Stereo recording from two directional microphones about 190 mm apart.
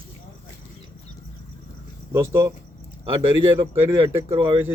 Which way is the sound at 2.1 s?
15° right (ahead or behind).